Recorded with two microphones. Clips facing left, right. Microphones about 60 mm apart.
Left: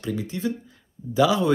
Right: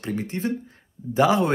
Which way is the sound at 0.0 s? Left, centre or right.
Right.